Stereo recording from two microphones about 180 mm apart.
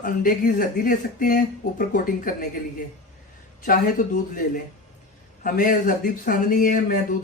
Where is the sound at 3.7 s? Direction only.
50° left (ahead or behind).